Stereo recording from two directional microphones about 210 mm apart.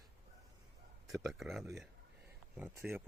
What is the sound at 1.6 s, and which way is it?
Speech, 15° right (ahead or behind).